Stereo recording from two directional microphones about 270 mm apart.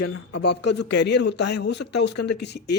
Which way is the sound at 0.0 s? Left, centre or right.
Left.